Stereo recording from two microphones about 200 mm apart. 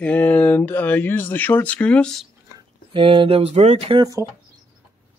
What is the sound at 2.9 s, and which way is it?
Speech, 25° right (ahead or behind).